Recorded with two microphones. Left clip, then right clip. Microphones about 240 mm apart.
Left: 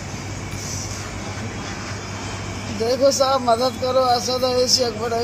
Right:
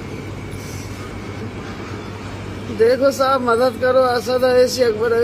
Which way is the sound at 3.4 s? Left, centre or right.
Centre.